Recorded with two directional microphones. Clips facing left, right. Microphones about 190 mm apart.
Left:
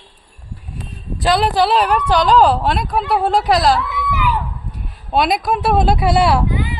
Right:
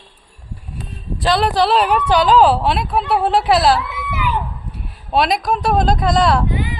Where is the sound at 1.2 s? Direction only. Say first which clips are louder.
Left 1 dB; centre (ahead or behind).